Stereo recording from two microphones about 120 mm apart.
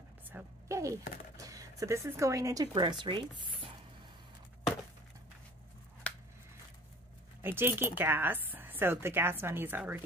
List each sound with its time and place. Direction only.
0.3 s a sound: 20° right (ahead or behind)
1.4 s speech: 30° right (ahead or behind)
7.4 s speech: 20° right (ahead or behind)